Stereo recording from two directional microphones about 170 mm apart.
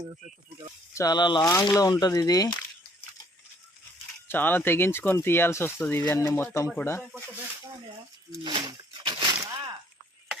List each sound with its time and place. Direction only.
0.9 s speech: 25° left (ahead or behind)
4.3 s speech: 10° left (ahead or behind)
8.3 s a sound: 25° right (ahead or behind)